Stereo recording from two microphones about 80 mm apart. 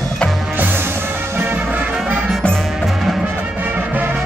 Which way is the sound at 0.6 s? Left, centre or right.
Right.